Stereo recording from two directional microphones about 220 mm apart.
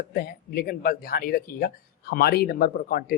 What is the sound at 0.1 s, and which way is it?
Speech, 45° left (ahead or behind).